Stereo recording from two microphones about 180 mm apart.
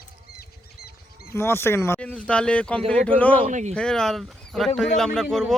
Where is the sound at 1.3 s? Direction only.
15° left (ahead or behind).